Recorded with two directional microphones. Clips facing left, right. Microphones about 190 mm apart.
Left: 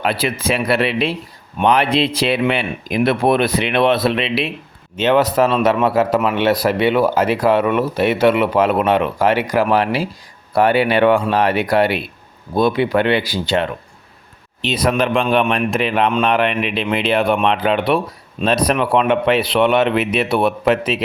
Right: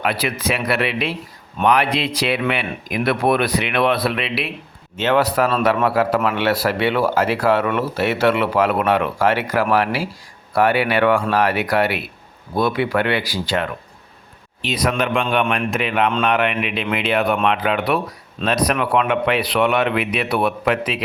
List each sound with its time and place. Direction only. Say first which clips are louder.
0.0 s speech: left 2 dB; 30° left (ahead or behind)